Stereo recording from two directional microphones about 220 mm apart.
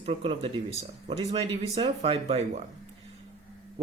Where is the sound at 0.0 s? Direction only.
25° right (ahead or behind).